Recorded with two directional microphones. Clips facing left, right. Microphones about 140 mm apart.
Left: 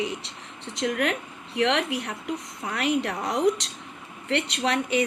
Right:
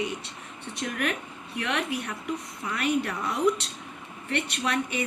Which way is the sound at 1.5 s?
70° left (ahead or behind).